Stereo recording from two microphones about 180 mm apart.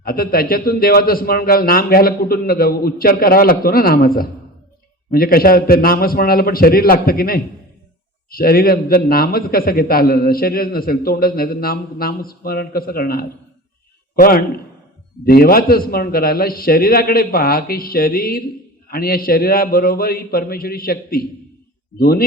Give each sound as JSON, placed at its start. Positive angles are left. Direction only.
{"t": 0.0, "sound": "a man's voice", "side_deg": 55}